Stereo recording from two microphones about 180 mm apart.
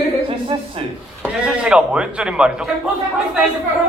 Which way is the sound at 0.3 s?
30° right (ahead or behind).